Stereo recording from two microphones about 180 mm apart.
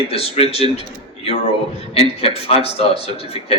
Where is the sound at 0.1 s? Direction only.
35° left (ahead or behind).